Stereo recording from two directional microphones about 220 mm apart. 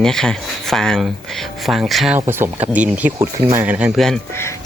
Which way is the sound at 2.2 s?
10° right (ahead or behind).